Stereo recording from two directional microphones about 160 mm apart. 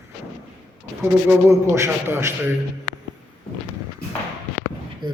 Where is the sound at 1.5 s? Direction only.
15° right (ahead or behind).